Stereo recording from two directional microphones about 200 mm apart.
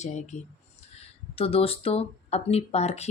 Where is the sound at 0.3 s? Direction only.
35° left (ahead or behind).